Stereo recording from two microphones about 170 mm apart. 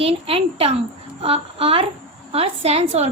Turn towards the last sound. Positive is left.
turn(degrees=-40)  # may be behind; listen again after turning